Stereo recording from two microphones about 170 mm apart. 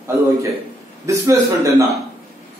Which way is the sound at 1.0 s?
15° right (ahead or behind).